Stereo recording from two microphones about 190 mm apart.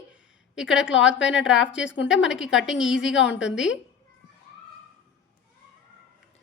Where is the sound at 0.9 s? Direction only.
80° left.